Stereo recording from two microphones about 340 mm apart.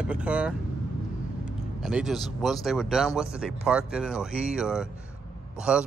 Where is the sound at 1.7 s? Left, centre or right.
Centre.